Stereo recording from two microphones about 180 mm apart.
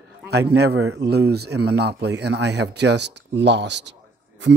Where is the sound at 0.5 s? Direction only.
65° right (ahead or behind).